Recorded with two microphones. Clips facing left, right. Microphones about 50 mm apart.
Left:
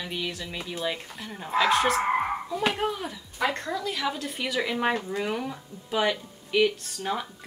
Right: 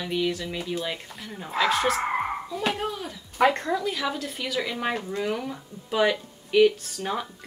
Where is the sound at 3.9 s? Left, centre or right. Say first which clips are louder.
Right 1 dB; centre.